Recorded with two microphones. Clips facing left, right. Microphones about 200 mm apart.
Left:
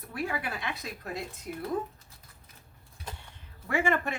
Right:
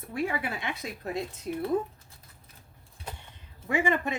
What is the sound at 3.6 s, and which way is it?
Speech, 15° right (ahead or behind).